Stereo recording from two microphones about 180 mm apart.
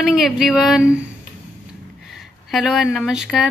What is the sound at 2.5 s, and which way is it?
Speech, centre (ahead or behind).